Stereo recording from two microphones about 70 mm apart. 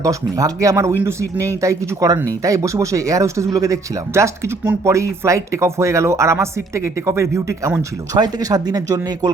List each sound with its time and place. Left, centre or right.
0.0 s speech: right
8.1 s speech: right